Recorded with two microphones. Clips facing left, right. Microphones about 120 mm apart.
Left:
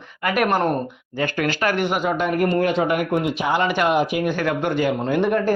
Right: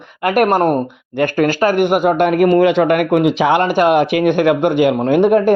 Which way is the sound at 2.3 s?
90° right.